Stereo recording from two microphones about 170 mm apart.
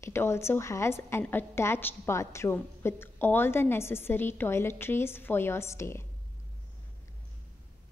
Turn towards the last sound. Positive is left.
turn(degrees=15)  # may be behind; listen again after turning